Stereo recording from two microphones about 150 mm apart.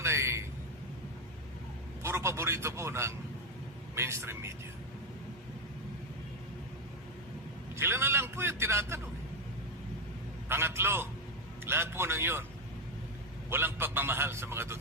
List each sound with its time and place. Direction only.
0.0 s a sound: 15° right (ahead or behind)
2.0 s a man's voice: 20° right (ahead or behind)
7.8 s a man's voice: 15° right (ahead or behind)
10.5 s a man's voice: 15° right (ahead or behind)
13.5 s a man's voice: 15° right (ahead or behind)